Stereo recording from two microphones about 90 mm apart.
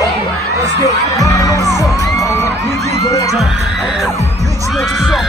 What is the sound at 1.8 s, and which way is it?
Music, 40° left (ahead or behind).